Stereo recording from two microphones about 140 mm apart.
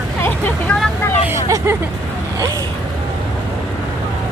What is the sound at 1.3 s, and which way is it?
Speech, 20° right (ahead or behind).